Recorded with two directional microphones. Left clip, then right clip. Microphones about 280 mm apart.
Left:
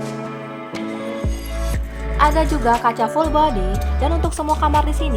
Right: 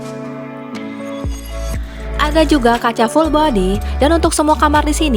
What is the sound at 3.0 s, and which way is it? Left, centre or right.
Speech, right.